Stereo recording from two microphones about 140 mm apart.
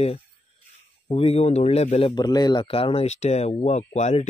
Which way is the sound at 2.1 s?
30° left (ahead or behind).